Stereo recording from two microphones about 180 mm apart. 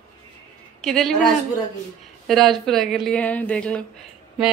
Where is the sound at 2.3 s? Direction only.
Centre (ahead or behind).